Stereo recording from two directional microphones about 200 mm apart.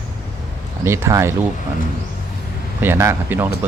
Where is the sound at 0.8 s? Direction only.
15° right (ahead or behind).